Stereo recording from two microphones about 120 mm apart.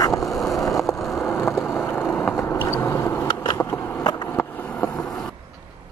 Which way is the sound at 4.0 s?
35° left (ahead or behind).